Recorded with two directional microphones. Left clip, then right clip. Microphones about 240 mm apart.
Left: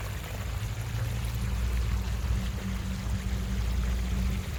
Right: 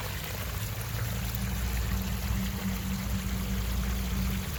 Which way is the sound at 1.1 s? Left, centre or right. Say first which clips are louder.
Right 2 dB; right.